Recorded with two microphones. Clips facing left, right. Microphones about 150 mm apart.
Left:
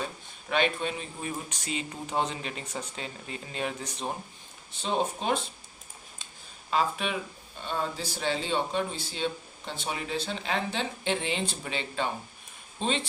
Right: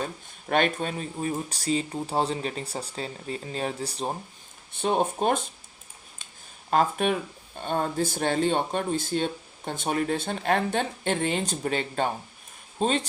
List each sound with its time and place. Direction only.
0.0 s speech: 50° right (ahead or behind)
4.7 s speech: 55° right (ahead or behind)
6.7 s speech: 50° right (ahead or behind)